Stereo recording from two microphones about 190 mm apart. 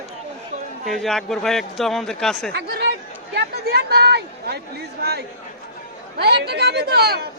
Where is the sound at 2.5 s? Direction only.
60° right (ahead or behind).